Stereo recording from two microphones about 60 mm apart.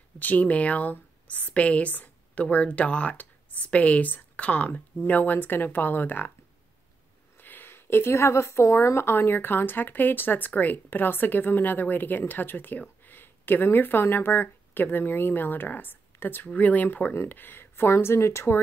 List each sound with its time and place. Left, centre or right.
0.2 s a woman's voice: left
7.3 s a woman's voice: left
17.8 s speech: left